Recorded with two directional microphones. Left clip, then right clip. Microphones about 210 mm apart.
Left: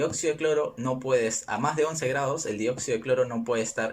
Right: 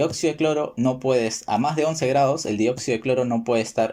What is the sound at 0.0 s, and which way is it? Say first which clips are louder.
Speech: right 5 dB; 20° right (ahead or behind).